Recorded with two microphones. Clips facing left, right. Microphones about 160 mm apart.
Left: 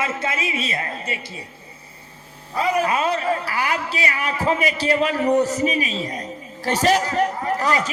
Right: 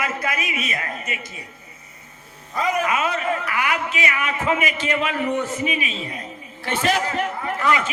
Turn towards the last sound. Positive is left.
turn(degrees=35)  # may be behind; listen again after turning